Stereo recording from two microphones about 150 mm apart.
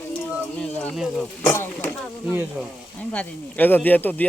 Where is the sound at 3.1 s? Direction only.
10° left (ahead or behind).